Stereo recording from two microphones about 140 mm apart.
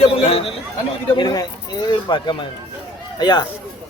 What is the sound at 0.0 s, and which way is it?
Speech, 40° left (ahead or behind).